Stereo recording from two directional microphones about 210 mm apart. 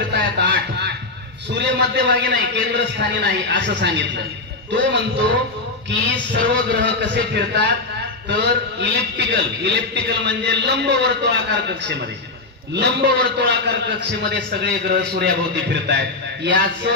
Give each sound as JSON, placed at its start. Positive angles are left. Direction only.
{"t": 0.1, "sound": "music", "side_deg": -55}
{"t": 1.5, "sound": "a man's voice", "side_deg": -55}